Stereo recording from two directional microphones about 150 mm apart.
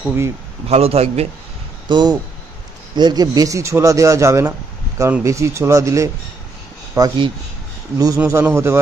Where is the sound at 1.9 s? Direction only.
30° right (ahead or behind).